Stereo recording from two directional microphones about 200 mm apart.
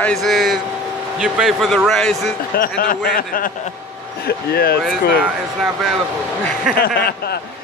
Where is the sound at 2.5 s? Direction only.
45° left (ahead or behind).